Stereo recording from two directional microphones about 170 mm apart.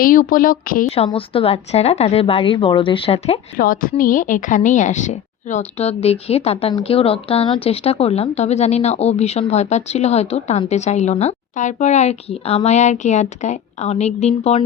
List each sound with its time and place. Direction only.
0.0 s speech: 55° left (ahead or behind)
0.9 s a woman's voice: 35° left (ahead or behind)
3.6 s a woman's voice: 55° left (ahead or behind); by 14.6 s 40° left (ahead or behind)